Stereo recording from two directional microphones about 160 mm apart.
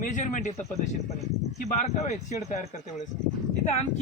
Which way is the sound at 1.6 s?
45° left (ahead or behind).